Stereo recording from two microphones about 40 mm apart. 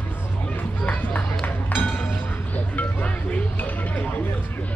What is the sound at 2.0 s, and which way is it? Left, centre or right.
Music, left.